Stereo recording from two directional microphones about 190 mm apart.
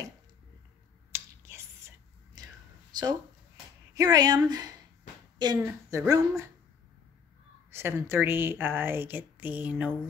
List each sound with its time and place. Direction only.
1.1 s finger snapping: 15° right (ahead or behind)
2.9 s a sound: 20° right (ahead or behind)
3.9 s speech: 20° right (ahead or behind)
7.7 s speech: 10° right (ahead or behind)